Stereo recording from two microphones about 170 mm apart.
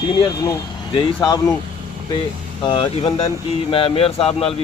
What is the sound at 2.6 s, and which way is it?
A man's voice, 25° left (ahead or behind).